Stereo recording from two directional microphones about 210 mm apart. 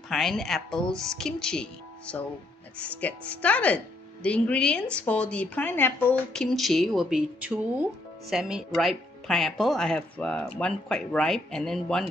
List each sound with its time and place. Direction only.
0.1 s speech: centre (ahead or behind)